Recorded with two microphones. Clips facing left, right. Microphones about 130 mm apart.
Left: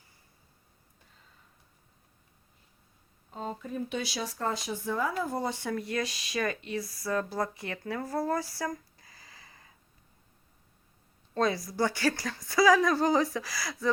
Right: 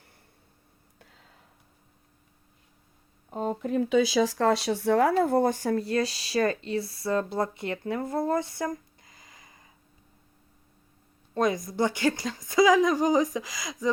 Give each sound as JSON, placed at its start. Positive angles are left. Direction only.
{"t": 0.9, "sound": "a sound", "side_deg": -90}
{"t": 3.3, "sound": "speech", "side_deg": -50}
{"t": 3.7, "sound": "speech", "side_deg": -90}
{"t": 11.3, "sound": "a woman's voice", "side_deg": -20}